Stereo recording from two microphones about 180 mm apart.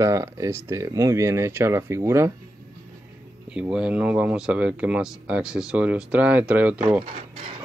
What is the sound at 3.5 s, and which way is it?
Speech, 5° right (ahead or behind).